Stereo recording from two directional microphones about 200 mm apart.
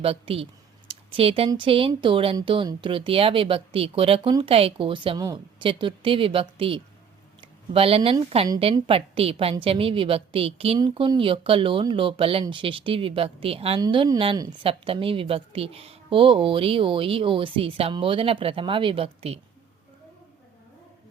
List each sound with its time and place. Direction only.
0.0 s a woman's voice: 30° right (ahead or behind)